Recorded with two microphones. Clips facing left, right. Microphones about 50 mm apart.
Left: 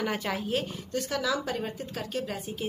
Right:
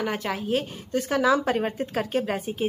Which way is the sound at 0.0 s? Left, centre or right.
Centre.